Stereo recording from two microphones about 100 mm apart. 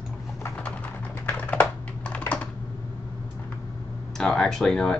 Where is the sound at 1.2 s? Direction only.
15° left (ahead or behind).